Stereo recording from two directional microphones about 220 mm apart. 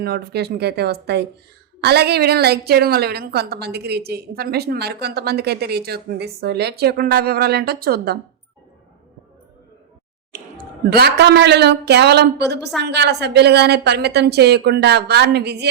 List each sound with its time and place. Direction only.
0.0 s a woman's voice: 45° right (ahead or behind)
10.8 s a woman's voice: 45° right (ahead or behind)